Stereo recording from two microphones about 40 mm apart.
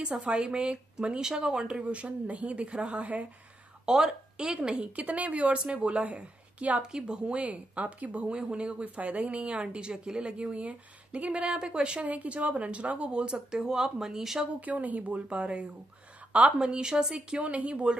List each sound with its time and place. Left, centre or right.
0.3 s speech: right
4.0 s speech: centre
4.7 s speech: right
6.8 s speech: centre; by 8.4 s right
8.4 s speech: right
11.4 s speech: right
12.0 s speech: right; by 14.4 s centre
14.6 s speech: right; by 17.1 s centre
17.1 s speech: right